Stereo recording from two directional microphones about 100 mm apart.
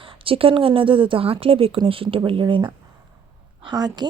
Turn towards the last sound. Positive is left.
turn(degrees=-45)  # may be behind; listen again after turning